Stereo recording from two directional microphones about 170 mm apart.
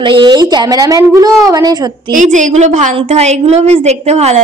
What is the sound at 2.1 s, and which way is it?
A woman's voice, 50° right (ahead or behind).